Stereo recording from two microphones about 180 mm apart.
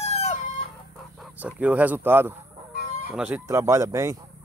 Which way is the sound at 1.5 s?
10° right (ahead or behind).